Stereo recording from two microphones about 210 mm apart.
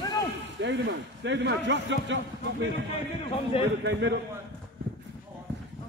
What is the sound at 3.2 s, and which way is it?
Speech, 25° left (ahead or behind).